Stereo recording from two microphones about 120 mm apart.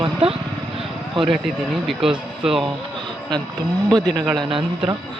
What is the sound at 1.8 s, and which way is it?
Speech, 5° right (ahead or behind).